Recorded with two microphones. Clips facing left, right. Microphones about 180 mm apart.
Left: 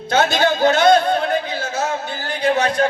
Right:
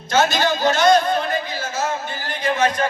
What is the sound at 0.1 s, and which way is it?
A man's voice, 60° left (ahead or behind).